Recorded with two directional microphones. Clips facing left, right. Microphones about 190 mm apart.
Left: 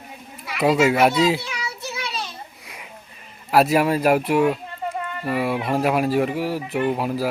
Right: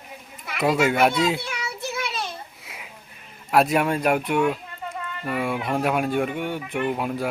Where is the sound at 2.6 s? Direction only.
5° right (ahead or behind).